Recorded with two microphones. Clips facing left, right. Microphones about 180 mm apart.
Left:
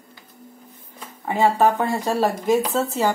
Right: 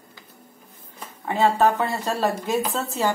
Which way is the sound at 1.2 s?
10° left (ahead or behind).